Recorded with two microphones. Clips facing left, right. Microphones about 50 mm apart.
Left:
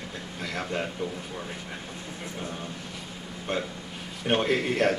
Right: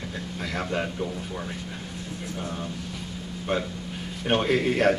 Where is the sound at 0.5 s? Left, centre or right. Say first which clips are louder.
Right 2 dB; centre.